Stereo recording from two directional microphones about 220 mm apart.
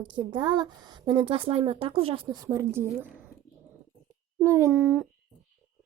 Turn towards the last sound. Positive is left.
turn(degrees=-5)  # may be behind; listen again after turning